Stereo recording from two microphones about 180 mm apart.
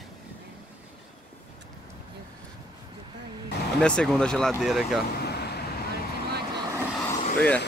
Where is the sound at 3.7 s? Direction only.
5° left (ahead or behind).